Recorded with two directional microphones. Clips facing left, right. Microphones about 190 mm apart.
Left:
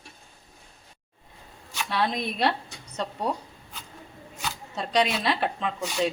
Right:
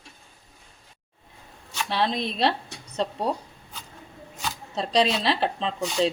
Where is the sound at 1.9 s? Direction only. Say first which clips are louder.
Right 1 dB; 25° right (ahead or behind).